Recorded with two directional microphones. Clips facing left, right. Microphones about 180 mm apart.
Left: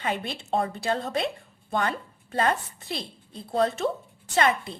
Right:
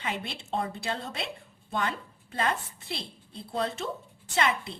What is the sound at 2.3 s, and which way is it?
A woman's voice, 45° left (ahead or behind).